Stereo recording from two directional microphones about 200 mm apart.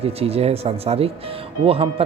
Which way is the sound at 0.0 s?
30° right (ahead or behind).